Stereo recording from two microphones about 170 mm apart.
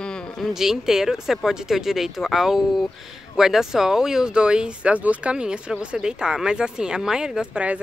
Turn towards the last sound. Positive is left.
turn(degrees=-5)  # may be behind; listen again after turning